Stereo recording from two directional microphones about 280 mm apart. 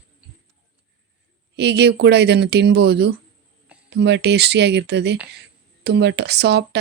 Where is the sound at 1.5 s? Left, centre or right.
Right.